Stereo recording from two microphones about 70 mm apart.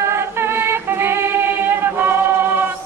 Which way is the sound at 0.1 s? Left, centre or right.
Right.